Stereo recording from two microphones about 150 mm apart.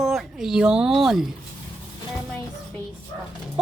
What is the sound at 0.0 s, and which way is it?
Speech, centre (ahead or behind).